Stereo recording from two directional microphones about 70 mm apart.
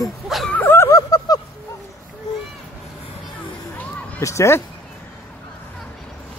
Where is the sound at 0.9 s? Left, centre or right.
Left.